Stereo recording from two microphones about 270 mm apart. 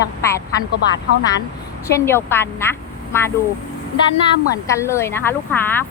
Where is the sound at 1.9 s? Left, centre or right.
Centre.